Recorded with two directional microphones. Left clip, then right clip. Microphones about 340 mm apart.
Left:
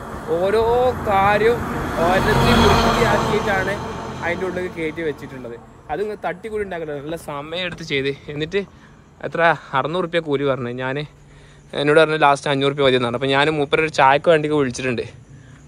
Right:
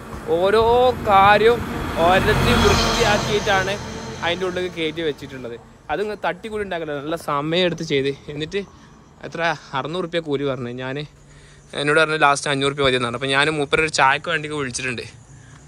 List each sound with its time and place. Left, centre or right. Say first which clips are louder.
0.0 s vehicle: right 1 dB; centre
0.6 s speech: right 2 dB; centre
1.0 s a man's voice: right 5 dB; centre
1.5 s speech: right 1 dB; centre
2.3 s speech: left 2 dB; centre
4.3 s a man's voice: right 1 dB; centre